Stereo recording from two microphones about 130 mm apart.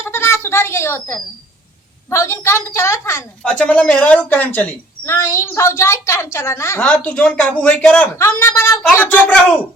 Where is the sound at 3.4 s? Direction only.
10° left (ahead or behind).